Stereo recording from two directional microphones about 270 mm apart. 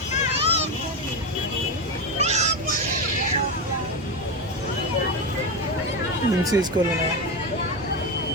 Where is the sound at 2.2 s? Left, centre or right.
Right.